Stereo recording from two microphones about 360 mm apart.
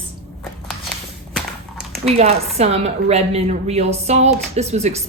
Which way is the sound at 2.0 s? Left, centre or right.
Centre.